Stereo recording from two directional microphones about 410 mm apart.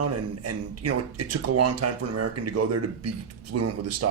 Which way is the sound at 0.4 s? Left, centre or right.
Right.